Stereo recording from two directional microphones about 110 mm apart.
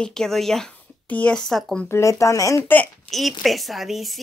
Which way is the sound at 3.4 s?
Centre (ahead or behind).